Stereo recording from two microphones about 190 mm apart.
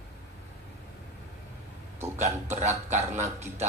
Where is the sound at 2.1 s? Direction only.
35° right (ahead or behind).